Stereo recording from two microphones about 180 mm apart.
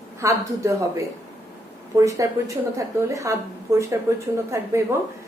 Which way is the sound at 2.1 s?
15° right (ahead or behind).